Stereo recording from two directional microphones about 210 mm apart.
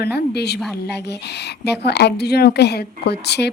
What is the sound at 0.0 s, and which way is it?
A woman's voice, 50° left (ahead or behind).